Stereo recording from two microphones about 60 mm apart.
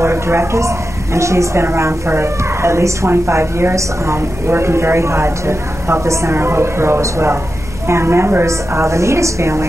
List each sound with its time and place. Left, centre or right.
0.0 s a woman's voice: right
6.3 s a woman's voice: right
8.5 s a woman's voice: right